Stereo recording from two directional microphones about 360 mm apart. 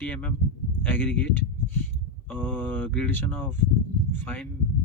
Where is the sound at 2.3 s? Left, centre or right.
Centre.